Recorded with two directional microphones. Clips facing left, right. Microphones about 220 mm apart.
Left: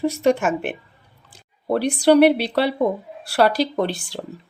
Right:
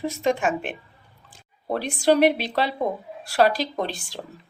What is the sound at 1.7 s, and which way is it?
A woman's voice, 65° left (ahead or behind).